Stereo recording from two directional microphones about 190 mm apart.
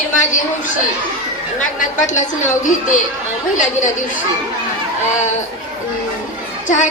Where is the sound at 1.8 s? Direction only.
40° left (ahead or behind).